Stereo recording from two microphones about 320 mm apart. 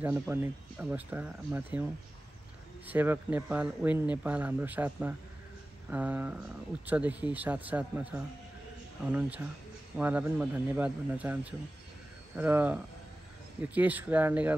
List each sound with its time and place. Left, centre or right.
0.0 s speech: centre
2.9 s speech: centre
9.9 s speech: centre
12.4 s speech: centre